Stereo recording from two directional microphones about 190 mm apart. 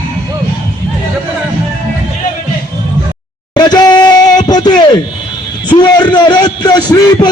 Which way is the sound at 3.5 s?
20° left (ahead or behind).